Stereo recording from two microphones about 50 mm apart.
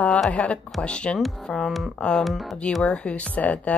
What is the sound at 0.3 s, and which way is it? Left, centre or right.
Speech, left.